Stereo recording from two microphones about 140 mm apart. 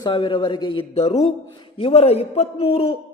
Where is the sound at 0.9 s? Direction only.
50° left (ahead or behind).